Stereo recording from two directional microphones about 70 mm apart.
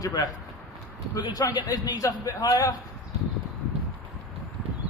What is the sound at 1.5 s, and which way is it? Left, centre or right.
A man's voice, left.